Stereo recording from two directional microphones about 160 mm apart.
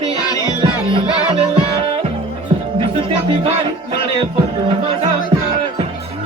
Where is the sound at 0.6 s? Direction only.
30° right (ahead or behind).